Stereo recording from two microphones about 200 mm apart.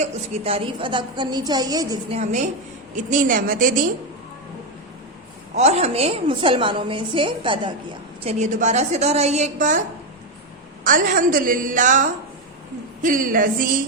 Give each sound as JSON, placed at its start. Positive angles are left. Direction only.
{"t": 0.0, "sound": "a woman's voice", "side_deg": -30}
{"t": 2.0, "sound": "a woman's voice", "side_deg": -35}
{"t": 5.5, "sound": "a woman's voice", "side_deg": -35}
{"t": 10.8, "sound": "a woman's voice", "side_deg": -40}